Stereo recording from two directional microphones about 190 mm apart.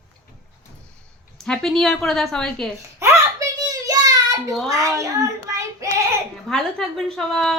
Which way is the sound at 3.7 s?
20° right (ahead or behind).